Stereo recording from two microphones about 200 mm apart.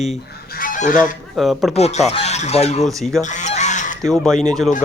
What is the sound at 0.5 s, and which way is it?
Goose, 45° left (ahead or behind).